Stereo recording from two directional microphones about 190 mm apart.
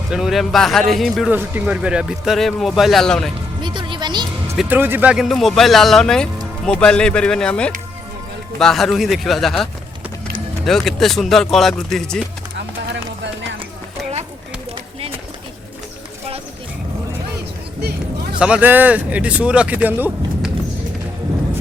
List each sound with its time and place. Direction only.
0.1 s speech: centre (ahead or behind)
3.6 s speech: 25° right (ahead or behind)
4.5 s speech: 10° right (ahead or behind)
10.7 s speech: centre (ahead or behind)
12.5 s music: 70° right (ahead or behind)
18.3 s speech: 5° right (ahead or behind)